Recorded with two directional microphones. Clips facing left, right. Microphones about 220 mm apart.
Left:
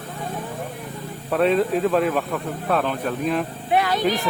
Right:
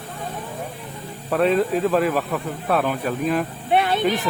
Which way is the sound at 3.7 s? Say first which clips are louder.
Right 1 dB; 25° right (ahead or behind).